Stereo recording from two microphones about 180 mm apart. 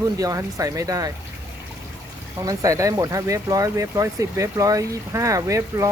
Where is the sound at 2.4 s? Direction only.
20° right (ahead or behind).